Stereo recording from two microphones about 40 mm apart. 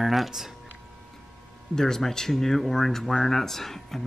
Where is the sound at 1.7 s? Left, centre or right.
Centre.